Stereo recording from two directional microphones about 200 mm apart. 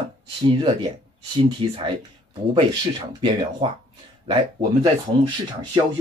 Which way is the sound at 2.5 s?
25° right (ahead or behind).